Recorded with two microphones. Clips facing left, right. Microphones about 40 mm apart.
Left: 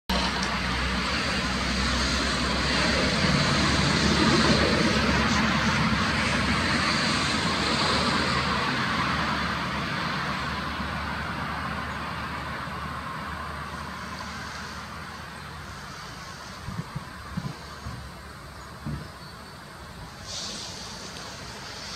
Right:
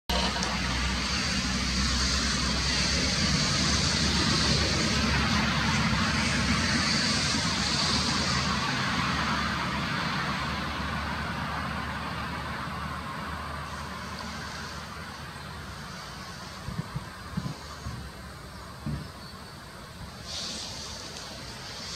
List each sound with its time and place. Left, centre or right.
0.1 s vehicle: centre